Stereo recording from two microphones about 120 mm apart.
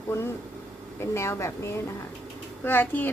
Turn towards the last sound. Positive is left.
turn(degrees=15)  # may be behind; listen again after turning